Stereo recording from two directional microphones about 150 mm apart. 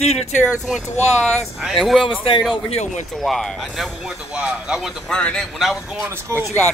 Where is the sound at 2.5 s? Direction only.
40° left (ahead or behind).